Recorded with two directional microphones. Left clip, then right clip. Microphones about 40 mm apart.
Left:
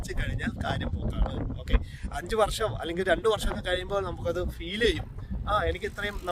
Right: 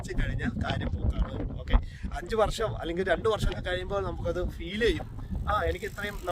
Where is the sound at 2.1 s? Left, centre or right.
Left.